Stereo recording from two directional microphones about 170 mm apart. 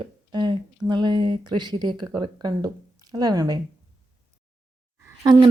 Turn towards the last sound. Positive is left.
turn(degrees=-25)  # may be behind; listen again after turning